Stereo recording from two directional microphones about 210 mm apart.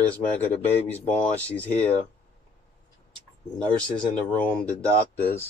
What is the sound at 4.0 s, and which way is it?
Speech, 5° left (ahead or behind).